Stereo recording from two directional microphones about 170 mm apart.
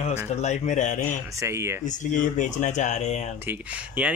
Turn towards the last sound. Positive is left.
turn(degrees=-10)  # may be behind; listen again after turning